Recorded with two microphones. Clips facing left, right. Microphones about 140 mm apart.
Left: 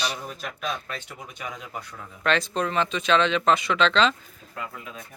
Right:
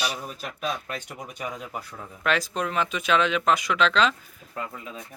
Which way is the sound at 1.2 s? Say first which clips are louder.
Right 3 dB; 40° right (ahead or behind).